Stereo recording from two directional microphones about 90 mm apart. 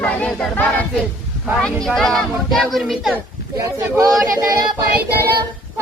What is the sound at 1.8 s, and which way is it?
Speech, 5° left (ahead or behind).